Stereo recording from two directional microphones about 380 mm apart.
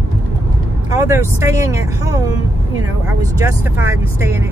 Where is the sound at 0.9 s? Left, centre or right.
Centre.